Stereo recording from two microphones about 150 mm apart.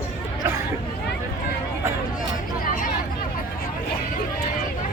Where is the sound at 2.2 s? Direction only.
65° left (ahead or behind).